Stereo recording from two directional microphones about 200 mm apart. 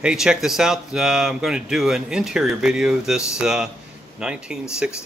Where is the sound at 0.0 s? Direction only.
5° right (ahead or behind).